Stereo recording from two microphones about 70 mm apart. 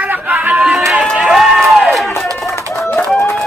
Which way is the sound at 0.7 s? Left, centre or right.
Centre.